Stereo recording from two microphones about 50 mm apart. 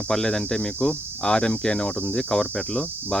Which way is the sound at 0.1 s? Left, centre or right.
Centre.